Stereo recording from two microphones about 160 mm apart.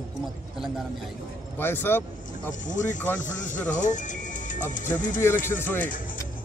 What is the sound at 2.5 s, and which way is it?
Speech, 50° left (ahead or behind).